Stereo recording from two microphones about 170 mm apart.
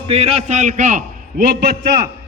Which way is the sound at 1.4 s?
65° right (ahead or behind).